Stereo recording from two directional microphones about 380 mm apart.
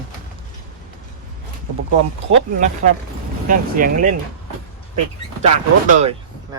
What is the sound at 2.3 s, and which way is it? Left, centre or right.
Speech, centre.